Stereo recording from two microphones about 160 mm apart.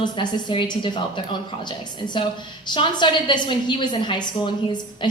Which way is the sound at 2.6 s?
30° left (ahead or behind).